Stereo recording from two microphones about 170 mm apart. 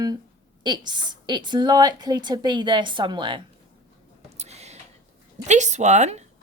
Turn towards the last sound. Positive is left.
turn(degrees=-40)  # may be behind; listen again after turning